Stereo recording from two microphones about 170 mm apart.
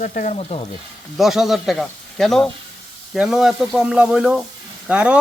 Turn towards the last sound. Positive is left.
turn(degrees=-5)  # may be behind; listen again after turning